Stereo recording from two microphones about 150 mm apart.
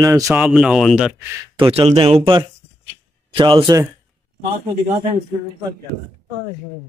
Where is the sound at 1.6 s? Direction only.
40° right (ahead or behind).